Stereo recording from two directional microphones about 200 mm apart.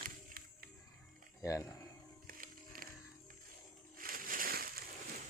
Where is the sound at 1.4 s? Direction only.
15° left (ahead or behind).